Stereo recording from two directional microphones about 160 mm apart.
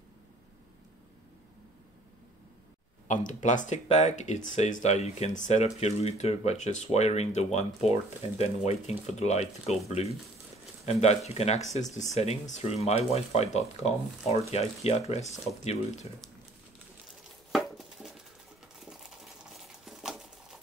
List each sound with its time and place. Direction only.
3.1 s speech: 50° left (ahead or behind)
17.5 s a sound: centre (ahead or behind)
18.9 s crumpling: centre (ahead or behind)